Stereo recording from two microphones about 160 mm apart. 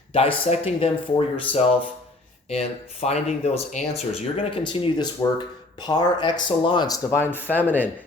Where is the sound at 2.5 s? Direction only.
40° left (ahead or behind).